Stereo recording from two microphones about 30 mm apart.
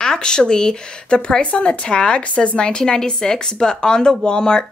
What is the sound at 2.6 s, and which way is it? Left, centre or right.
Speech, left.